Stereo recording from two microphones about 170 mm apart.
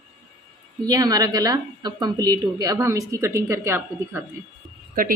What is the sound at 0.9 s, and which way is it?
A woman's voice, 20° right (ahead or behind).